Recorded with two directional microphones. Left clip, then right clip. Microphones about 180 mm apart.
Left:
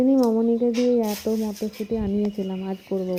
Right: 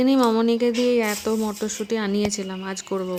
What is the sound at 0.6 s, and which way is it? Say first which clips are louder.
Speech: right 1 dB; 5° right (ahead or behind).